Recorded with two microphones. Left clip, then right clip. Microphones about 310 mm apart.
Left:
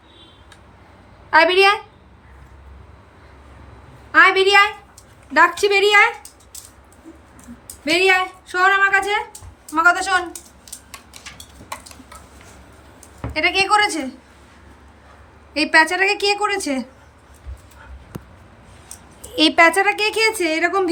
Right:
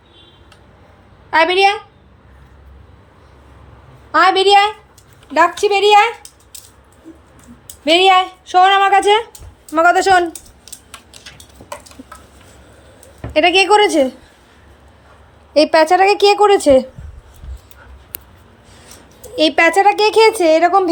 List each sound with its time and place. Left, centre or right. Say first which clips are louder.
1.3 s a woman's voice: right 1 dB; centre
4.1 s a woman's voice: right 2 dB; centre
7.9 s speech: right 6 dB; centre
13.3 s speech: right 6 dB; centre
15.5 s speech: right 5 dB; centre
19.4 s a woman's voice: right 2 dB; centre